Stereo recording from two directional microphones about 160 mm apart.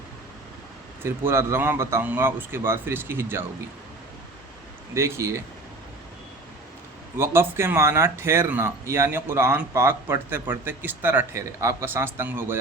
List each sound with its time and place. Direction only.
1.0 s speech: 15° right (ahead or behind)
4.9 s speech: 15° right (ahead or behind)
7.2 s speech: 15° right (ahead or behind)